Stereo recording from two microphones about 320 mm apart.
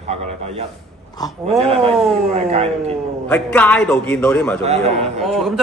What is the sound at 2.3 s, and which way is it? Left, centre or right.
Speech, centre.